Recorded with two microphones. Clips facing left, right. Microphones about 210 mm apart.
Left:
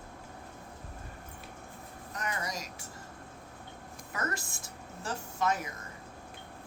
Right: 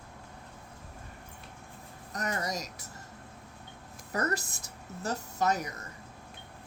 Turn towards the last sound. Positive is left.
turn(degrees=-40)  # may be behind; listen again after turning